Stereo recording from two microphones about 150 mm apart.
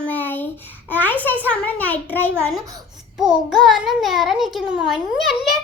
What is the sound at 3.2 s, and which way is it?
A child's voice, 5° right (ahead or behind).